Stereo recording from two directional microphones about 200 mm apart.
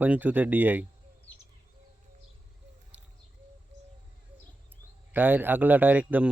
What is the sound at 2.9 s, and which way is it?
Bird, 5° right (ahead or behind).